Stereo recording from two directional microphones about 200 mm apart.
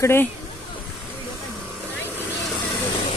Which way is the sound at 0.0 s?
10° left (ahead or behind).